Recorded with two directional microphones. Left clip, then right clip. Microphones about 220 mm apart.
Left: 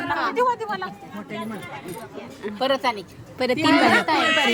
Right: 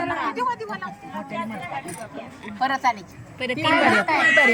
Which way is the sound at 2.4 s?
15° left (ahead or behind).